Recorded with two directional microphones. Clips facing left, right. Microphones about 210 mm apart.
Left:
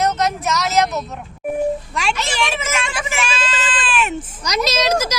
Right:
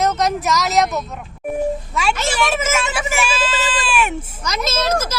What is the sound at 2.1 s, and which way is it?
Speech, 45° right (ahead or behind).